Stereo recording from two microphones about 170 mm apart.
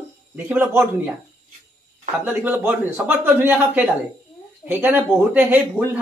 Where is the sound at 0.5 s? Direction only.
10° right (ahead or behind).